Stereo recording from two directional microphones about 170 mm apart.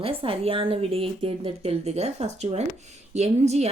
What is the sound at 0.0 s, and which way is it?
A woman's voice, 35° right (ahead or behind).